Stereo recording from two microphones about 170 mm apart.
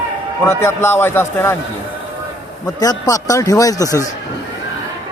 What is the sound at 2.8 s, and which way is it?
Speech, 20° left (ahead or behind).